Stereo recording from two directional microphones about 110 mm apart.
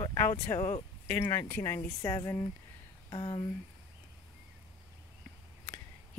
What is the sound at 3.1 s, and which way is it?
Speech, 45° left (ahead or behind).